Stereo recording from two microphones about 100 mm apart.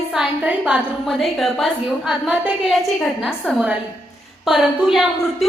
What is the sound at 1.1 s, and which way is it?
A woman's voice, centre (ahead or behind).